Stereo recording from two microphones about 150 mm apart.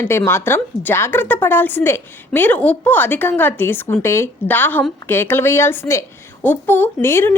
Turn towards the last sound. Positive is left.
turn(degrees=15)  # may be behind; listen again after turning